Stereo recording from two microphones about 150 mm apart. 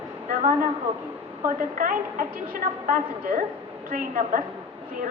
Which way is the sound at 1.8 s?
65° right (ahead or behind).